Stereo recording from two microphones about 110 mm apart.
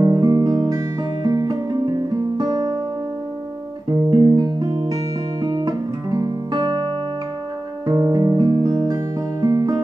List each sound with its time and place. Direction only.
0.0 s music: 40° right (ahead or behind)
3.9 s music: 40° right (ahead or behind)
5.4 s guitar: 40° right (ahead or behind)
7.8 s music: 40° right (ahead or behind)